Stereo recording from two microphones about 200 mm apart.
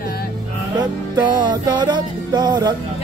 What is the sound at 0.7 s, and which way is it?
Music, 20° right (ahead or behind).